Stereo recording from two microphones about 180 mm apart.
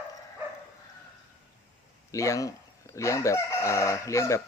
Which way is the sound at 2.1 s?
15° left (ahead or behind).